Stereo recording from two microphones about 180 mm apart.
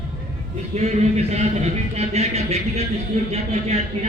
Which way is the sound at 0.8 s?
35° right (ahead or behind).